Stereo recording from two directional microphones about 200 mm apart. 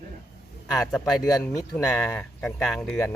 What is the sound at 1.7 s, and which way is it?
Speech, 5° left (ahead or behind).